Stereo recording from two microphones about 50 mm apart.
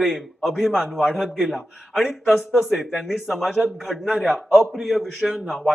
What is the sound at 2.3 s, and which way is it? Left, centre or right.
A man's voice, centre.